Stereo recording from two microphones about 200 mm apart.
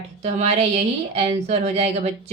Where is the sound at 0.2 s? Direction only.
30° right (ahead or behind).